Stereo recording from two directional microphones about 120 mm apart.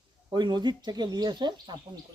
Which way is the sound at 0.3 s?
40° right (ahead or behind).